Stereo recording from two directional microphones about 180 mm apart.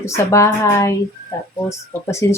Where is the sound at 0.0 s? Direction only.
15° left (ahead or behind).